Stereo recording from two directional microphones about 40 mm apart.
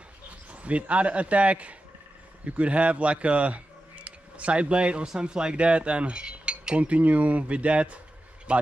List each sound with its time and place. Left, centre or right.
0.5 s cutlery: right
2.4 s speech: right
5.0 s cutlery: centre
8.5 s a man's voice: right